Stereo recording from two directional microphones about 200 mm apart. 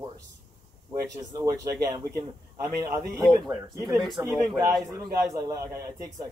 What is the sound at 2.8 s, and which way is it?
Speech, 15° right (ahead or behind).